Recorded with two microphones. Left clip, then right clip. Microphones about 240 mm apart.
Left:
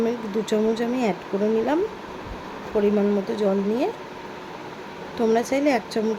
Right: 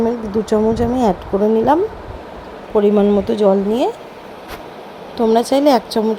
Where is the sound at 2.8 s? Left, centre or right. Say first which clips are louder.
Right 8 dB; right.